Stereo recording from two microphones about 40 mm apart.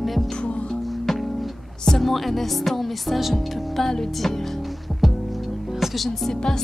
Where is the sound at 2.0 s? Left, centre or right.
Centre.